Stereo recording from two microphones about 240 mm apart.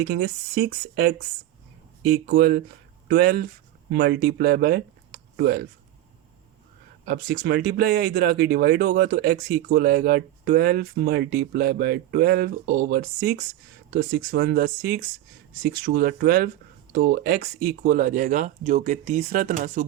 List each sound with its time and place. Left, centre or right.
0.0 s speech: right
7.0 s speech: right